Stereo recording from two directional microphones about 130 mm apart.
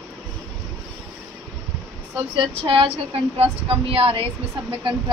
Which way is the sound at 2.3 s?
45° right (ahead or behind).